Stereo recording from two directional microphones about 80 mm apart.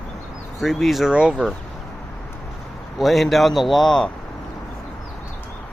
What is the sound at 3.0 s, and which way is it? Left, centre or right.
Speech, centre.